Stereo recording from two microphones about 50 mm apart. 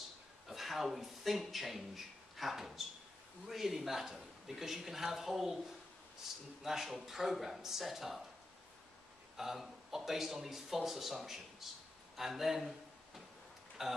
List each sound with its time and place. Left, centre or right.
0.5 s a woman's voice: centre
6.6 s a woman's voice: centre
9.4 s a woman's voice: centre